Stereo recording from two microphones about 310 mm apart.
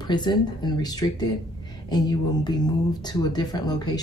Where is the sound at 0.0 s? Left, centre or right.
Centre.